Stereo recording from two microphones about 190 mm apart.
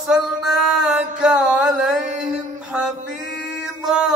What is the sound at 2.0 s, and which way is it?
Mantra, 40° right (ahead or behind).